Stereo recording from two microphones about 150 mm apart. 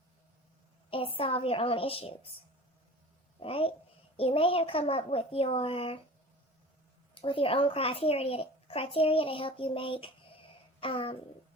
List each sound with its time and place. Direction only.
0.9 s a child's voice: 35° left (ahead or behind)
3.4 s a child's voice: 40° left (ahead or behind)
7.1 s a child's voice: 35° left (ahead or behind)